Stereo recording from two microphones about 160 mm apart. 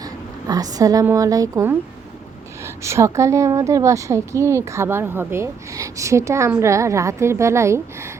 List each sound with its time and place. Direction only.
0.0 s a woman's voice: 25° right (ahead or behind)